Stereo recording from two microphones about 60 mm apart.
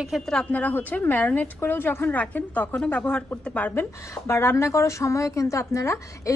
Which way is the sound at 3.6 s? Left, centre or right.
Left.